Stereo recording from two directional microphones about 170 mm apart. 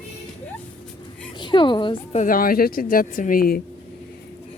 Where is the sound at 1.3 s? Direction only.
25° left (ahead or behind).